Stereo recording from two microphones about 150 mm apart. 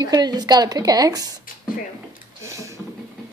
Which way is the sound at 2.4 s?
20° right (ahead or behind).